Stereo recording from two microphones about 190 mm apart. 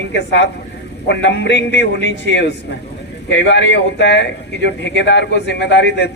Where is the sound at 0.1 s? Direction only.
65° left (ahead or behind).